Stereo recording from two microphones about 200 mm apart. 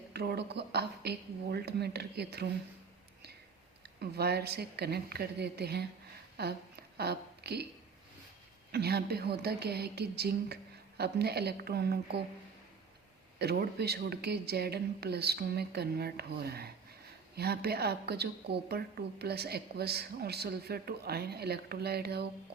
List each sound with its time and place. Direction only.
0.1 s a woman's voice: 55° right (ahead or behind)
4.0 s a woman's voice: 55° right (ahead or behind)
6.3 s a sound: 55° right (ahead or behind)
8.7 s a woman's voice: 55° right (ahead or behind)
13.4 s a woman's voice: 55° right (ahead or behind)